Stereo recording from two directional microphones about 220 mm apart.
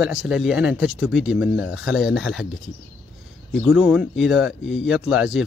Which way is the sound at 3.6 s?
5° right (ahead or behind).